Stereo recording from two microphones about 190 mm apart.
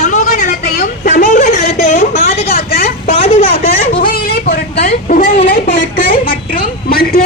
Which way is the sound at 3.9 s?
50° left (ahead or behind).